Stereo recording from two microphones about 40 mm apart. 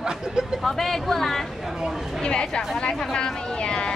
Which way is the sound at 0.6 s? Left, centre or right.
Centre.